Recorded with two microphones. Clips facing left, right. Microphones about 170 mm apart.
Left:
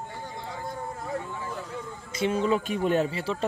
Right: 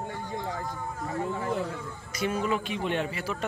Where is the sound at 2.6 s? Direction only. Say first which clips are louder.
Left 5 dB; 45° left (ahead or behind).